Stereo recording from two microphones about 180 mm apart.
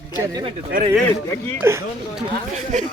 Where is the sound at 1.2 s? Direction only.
10° left (ahead or behind).